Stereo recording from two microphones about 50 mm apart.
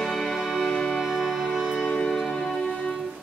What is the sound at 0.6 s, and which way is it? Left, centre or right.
Music, centre.